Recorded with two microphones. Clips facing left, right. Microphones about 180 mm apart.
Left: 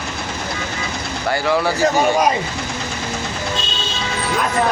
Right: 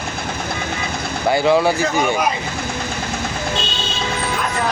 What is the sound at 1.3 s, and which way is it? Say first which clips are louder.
Speech: right 4 dB; 20° right (ahead or behind).